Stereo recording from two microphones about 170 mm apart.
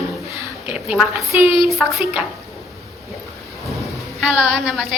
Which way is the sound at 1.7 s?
Centre (ahead or behind).